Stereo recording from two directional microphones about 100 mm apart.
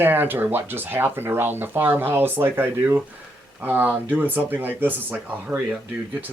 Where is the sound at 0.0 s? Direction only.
20° right (ahead or behind).